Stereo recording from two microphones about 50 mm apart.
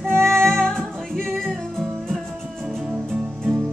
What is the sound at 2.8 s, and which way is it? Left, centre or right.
Music, right.